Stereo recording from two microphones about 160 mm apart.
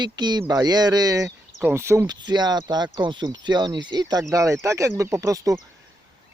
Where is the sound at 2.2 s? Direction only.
25° right (ahead or behind).